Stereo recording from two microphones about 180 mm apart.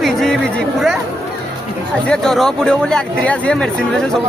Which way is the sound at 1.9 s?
5° left (ahead or behind).